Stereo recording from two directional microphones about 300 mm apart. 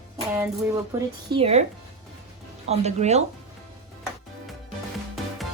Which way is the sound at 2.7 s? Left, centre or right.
Right.